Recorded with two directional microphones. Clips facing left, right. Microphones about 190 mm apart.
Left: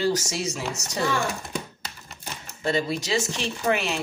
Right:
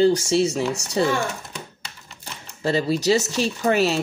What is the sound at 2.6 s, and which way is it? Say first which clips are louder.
Speech: right 5 dB; 35° right (ahead or behind).